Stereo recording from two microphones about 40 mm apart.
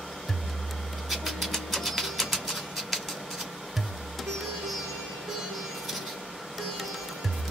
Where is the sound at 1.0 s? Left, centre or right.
Centre.